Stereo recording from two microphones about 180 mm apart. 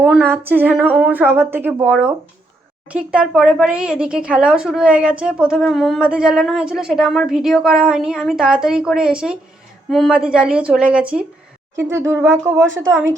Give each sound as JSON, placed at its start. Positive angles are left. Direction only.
{"t": 0.3, "sound": "speech", "side_deg": -10}